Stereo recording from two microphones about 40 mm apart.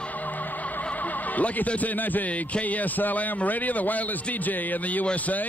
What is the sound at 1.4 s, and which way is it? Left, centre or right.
Speech, left.